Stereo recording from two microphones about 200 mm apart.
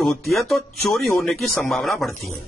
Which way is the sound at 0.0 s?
Centre (ahead or behind).